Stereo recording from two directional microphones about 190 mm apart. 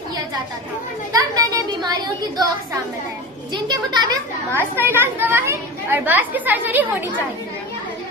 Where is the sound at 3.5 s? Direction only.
20° right (ahead or behind).